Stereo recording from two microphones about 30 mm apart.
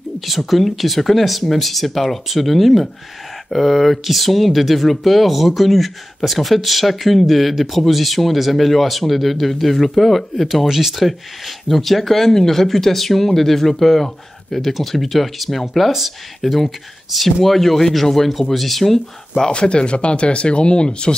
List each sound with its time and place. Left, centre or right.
0.2 s speech: centre
10.7 s speech: centre
11.0 s speech: centre
19.5 s speech: left